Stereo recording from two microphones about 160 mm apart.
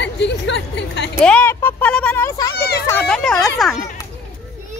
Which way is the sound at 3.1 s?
Centre (ahead or behind).